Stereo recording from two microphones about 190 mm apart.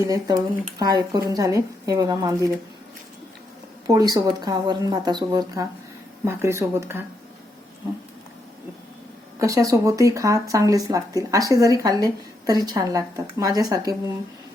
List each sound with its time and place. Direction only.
0.0 s speech: 15° right (ahead or behind)
3.8 s speech: 20° right (ahead or behind)
9.4 s speech: 15° right (ahead or behind)